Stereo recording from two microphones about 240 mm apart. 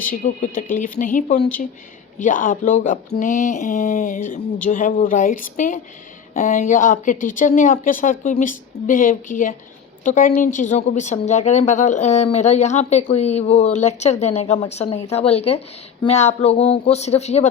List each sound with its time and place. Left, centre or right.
0.0 s a woman's voice: left